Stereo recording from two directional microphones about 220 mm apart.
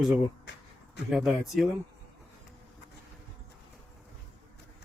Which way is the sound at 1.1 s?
Centre (ahead or behind).